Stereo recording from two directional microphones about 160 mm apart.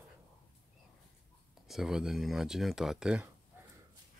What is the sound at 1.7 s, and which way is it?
Speech, 5° right (ahead or behind).